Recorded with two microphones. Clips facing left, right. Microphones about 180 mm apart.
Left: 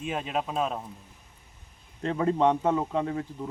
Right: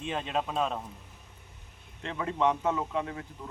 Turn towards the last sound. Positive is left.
turn(degrees=35)  # may be behind; listen again after turning